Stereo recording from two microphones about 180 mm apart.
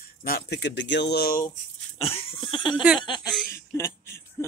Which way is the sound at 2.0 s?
30° left (ahead or behind).